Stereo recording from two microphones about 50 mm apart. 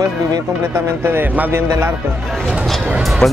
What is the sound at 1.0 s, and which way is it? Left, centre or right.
Speech, right.